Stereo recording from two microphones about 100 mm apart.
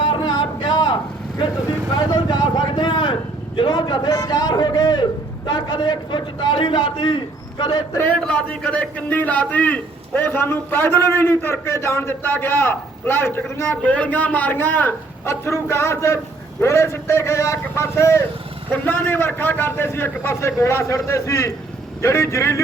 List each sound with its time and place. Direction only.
0.0 s a sound: 55° left (ahead or behind)
2.0 s a man's voice: 50° left (ahead or behind)
8.3 s a man's voice: 10° left (ahead or behind); by 22.6 s 30° left (ahead or behind)